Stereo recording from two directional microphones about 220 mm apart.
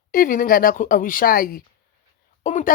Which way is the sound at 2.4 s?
35° left (ahead or behind).